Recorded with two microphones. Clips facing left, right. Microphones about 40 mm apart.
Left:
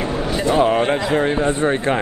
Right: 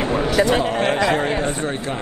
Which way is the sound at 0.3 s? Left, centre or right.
Right.